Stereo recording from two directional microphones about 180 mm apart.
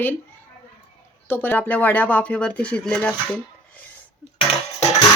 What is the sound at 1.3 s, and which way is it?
Speech, 10° left (ahead or behind).